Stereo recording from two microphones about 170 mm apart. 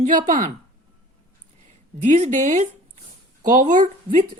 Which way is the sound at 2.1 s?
45° right (ahead or behind).